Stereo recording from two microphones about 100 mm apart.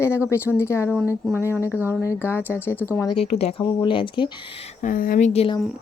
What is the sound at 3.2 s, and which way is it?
Speech, 85° left.